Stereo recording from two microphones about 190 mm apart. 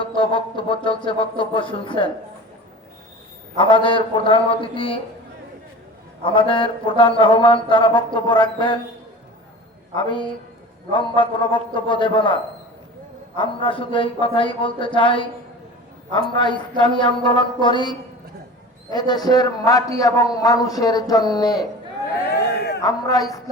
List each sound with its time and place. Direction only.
0.0 s a man's voice: 25° left (ahead or behind)
3.6 s a man's voice: 25° left (ahead or behind)
6.2 s a man's voice: 25° left (ahead or behind)
9.9 s a man's voice: 25° left (ahead or behind)
16.3 s a man's voice: 25° left (ahead or behind)
22.2 s a sound: 55° left (ahead or behind)
22.8 s a man's voice: 20° left (ahead or behind)